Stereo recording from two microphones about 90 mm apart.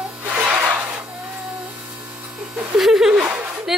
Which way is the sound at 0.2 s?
15° right (ahead or behind).